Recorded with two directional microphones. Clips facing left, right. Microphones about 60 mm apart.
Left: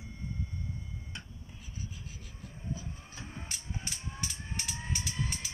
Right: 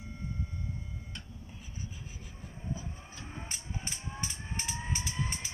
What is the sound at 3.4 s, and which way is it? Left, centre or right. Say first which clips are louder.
Vehicle: right 1 dB; right.